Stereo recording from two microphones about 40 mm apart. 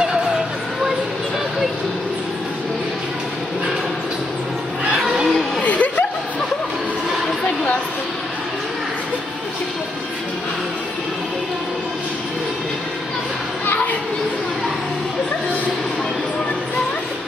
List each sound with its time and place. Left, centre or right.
5.6 s music: left